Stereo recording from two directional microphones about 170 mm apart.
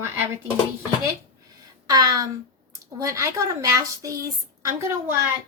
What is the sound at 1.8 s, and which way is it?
A woman's voice, 20° right (ahead or behind).